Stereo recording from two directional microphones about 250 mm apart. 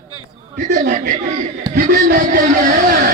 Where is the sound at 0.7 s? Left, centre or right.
Right.